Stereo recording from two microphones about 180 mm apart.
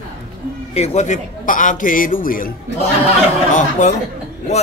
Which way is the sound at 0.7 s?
35° left (ahead or behind).